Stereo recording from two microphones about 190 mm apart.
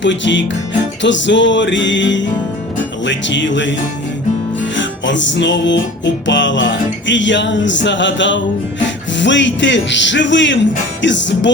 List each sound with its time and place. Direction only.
0.0 s music: 70° left (ahead or behind)
4.8 s music: 75° left (ahead or behind)